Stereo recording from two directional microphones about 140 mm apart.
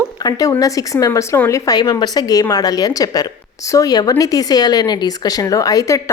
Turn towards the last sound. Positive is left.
turn(degrees=25)  # may be behind; listen again after turning